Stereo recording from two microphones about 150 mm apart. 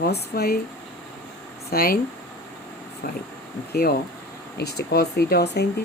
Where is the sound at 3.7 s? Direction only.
90° left.